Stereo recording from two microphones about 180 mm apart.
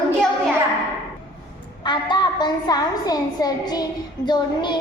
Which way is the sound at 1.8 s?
25° left (ahead or behind).